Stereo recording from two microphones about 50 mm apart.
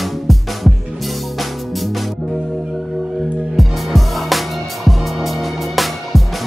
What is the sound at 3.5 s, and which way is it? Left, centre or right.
Music, centre.